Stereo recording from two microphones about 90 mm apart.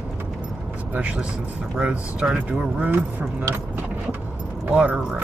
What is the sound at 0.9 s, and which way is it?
Speech, 15° right (ahead or behind).